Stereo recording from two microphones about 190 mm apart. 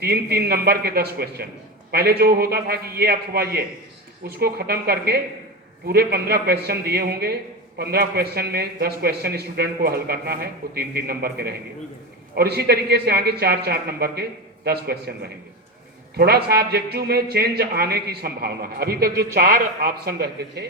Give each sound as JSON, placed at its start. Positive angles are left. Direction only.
{"t": 0.0, "sound": "speech", "side_deg": -55}